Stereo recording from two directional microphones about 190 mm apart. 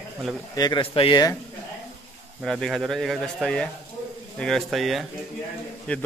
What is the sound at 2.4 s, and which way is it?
A man's voice, centre (ahead or behind).